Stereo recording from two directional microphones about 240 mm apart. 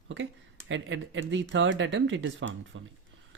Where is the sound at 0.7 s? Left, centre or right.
Right.